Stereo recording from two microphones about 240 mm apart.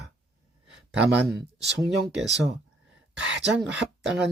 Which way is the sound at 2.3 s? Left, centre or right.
Right.